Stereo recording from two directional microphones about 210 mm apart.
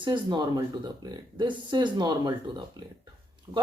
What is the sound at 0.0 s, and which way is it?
Speech, 20° right (ahead or behind).